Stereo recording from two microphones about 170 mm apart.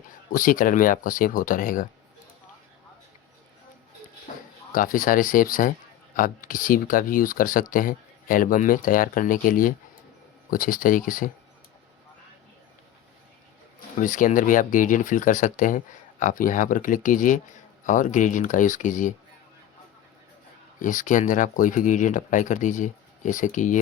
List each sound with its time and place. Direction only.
0.3 s speech: 55° left (ahead or behind)
4.7 s speech: 55° left (ahead or behind)
14.0 s speech: 50° left (ahead or behind)
20.7 s speech: 50° left (ahead or behind)